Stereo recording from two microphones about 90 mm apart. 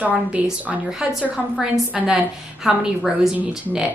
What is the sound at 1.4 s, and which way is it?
A woman's voice, 5° right (ahead or behind).